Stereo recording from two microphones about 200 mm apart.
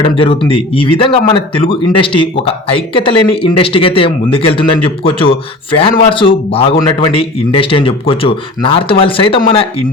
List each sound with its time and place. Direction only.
0.0 s speech: 25° left (ahead or behind)